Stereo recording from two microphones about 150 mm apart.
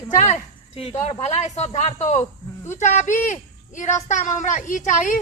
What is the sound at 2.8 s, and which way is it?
Speech, 55° left (ahead or behind).